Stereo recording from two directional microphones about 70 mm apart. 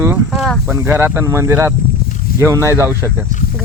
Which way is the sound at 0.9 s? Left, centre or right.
Right.